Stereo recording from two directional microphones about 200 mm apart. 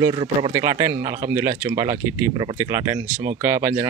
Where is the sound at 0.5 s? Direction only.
15° right (ahead or behind).